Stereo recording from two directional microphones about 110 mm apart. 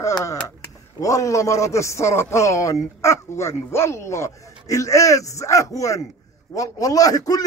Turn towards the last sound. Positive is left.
turn(degrees=35)  # may be behind; listen again after turning